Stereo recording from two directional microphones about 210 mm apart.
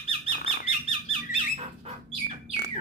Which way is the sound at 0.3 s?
30° left (ahead or behind).